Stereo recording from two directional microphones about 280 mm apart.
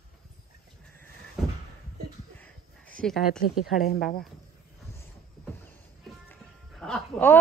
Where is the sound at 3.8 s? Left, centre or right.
Left.